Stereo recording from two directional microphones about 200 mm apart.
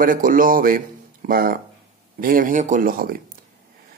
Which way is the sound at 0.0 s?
40° right (ahead or behind).